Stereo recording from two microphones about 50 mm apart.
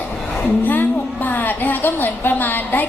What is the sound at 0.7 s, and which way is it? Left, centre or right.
A woman's voice, left.